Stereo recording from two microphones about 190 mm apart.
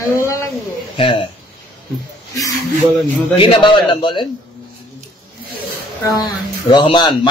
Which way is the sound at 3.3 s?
25° left (ahead or behind).